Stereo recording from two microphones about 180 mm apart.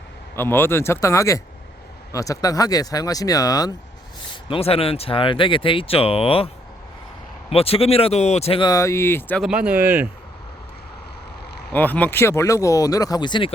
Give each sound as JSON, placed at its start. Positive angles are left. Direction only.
{"t": 0.3, "sound": "speech", "side_deg": 10}
{"t": 4.4, "sound": "speech", "side_deg": 30}
{"t": 7.5, "sound": "speech", "side_deg": 35}
{"t": 9.4, "sound": "speech", "side_deg": -5}
{"t": 11.7, "sound": "speech", "side_deg": 10}